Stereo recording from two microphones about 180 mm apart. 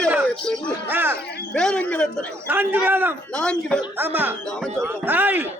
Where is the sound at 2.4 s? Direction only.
10° right (ahead or behind).